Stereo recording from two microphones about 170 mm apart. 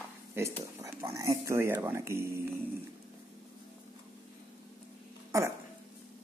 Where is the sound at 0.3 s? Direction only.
15° right (ahead or behind).